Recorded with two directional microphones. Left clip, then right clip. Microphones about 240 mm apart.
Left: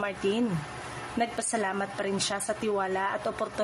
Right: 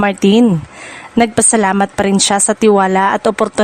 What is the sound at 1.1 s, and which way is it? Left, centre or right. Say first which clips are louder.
A woman's voice: right 17 dB; right.